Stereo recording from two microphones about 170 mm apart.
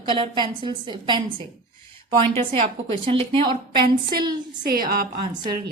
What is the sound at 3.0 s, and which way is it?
Speech, 30° right (ahead or behind).